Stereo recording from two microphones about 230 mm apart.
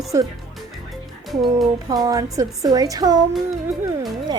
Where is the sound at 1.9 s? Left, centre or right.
Centre.